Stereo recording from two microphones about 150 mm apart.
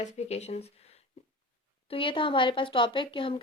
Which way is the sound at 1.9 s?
35° left (ahead or behind).